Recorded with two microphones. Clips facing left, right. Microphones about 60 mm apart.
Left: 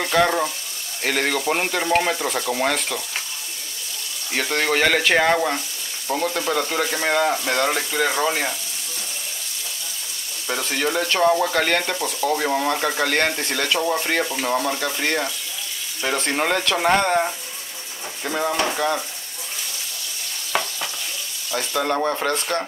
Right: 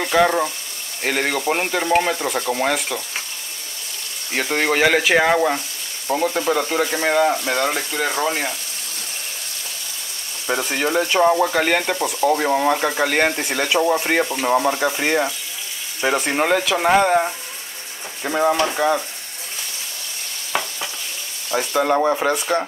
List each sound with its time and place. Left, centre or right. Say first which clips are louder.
0.0 s frying: right 2 dB; centre
1.0 s stir: right 1 dB; centre
4.3 s speech: right 2 dB; centre
6.0 s stir: right 3 dB; centre
10.4 s speech: right 2 dB; centre
20.5 s stir: even; centre
21.5 s speech: right 4 dB; centre